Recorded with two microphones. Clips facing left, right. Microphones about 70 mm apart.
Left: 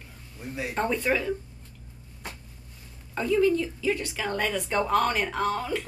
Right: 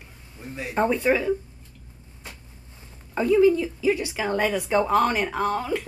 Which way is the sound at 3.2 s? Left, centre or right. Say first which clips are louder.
Right 5 dB; centre.